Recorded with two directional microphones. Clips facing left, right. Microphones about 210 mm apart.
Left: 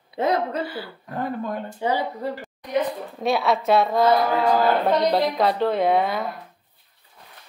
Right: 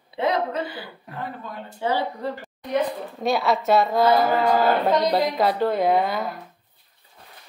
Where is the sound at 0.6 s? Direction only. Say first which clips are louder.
Left 2 dB; 20° right (ahead or behind).